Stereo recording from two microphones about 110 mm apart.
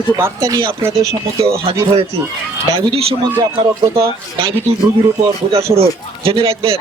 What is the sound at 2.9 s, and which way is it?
Speech, 65° right (ahead or behind).